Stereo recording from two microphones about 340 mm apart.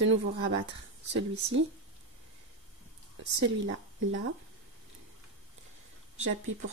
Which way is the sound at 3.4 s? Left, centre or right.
Right.